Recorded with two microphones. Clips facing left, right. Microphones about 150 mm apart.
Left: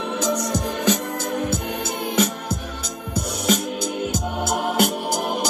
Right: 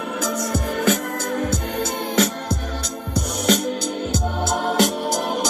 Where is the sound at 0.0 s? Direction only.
20° left (ahead or behind).